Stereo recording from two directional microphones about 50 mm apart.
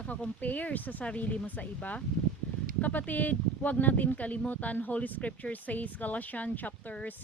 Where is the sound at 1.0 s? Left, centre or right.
Left.